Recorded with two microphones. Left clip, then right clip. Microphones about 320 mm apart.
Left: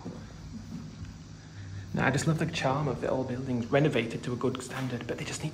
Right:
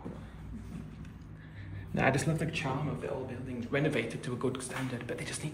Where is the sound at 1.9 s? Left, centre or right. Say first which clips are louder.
Even; centre.